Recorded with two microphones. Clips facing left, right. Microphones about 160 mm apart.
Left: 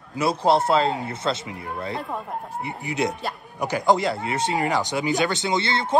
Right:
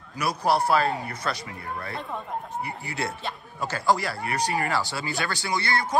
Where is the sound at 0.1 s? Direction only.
25° left (ahead or behind).